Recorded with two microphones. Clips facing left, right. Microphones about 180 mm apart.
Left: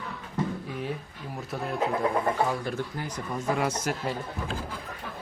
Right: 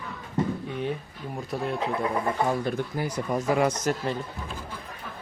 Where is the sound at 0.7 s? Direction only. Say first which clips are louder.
Right 3 dB; 5° left (ahead or behind).